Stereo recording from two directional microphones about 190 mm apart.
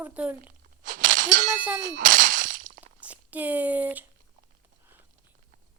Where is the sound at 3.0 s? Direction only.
10° right (ahead or behind).